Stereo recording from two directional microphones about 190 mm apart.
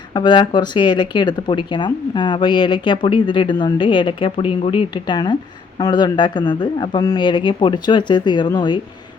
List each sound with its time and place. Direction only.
0.1 s speech: 25° left (ahead or behind)